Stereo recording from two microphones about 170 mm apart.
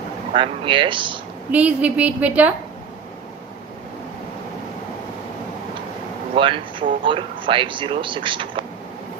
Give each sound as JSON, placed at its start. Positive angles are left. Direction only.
{"t": 0.3, "sound": "speech", "side_deg": -30}
{"t": 1.5, "sound": "a woman's voice", "side_deg": -10}
{"t": 6.3, "sound": "speech", "side_deg": -30}